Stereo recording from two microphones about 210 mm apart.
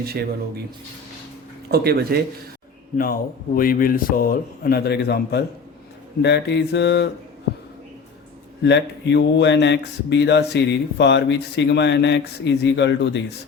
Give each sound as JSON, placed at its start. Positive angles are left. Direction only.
{"t": 0.0, "sound": "speech", "side_deg": -50}
{"t": 1.7, "sound": "speech", "side_deg": -50}
{"t": 3.0, "sound": "a man's voice", "side_deg": 45}
{"t": 8.6, "sound": "speech", "side_deg": 55}